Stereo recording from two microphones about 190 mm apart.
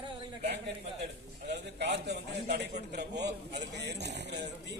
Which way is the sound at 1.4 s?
65° right (ahead or behind).